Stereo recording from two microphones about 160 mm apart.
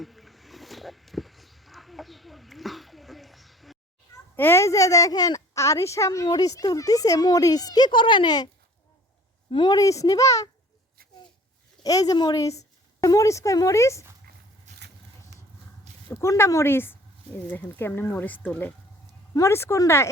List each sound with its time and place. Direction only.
0.0 s a sound: centre (ahead or behind)
4.4 s a woman's voice: 15° left (ahead or behind)
9.5 s a woman's voice: 30° left (ahead or behind)
11.8 s a woman's voice: 25° left (ahead or behind)
15.3 s a sound: 90° right
16.0 s speech: 15° left (ahead or behind)